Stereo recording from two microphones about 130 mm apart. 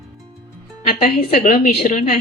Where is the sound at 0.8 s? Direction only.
90° left.